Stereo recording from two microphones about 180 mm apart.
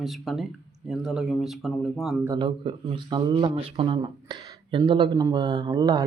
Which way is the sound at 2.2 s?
20° right (ahead or behind).